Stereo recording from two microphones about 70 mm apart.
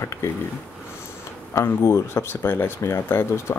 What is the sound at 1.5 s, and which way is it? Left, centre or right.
Speech, left.